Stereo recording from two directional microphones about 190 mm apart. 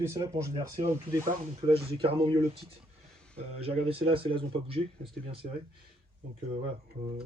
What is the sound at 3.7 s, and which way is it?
Speech, 30° right (ahead or behind).